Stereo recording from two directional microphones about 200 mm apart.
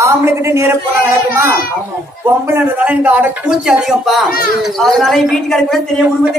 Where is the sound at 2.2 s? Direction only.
10° right (ahead or behind).